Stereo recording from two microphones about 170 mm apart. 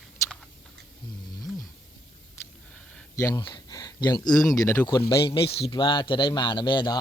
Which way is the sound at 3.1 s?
20° left (ahead or behind).